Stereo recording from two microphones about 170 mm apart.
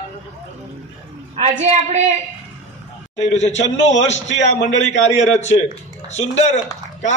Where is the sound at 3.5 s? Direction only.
90° left.